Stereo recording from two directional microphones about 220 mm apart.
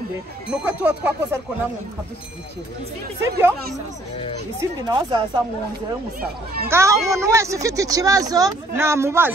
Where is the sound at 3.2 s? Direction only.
10° right (ahead or behind).